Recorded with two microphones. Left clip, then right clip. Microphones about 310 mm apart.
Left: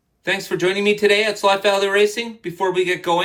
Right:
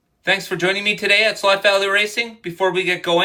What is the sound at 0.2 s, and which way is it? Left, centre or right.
Speech, centre.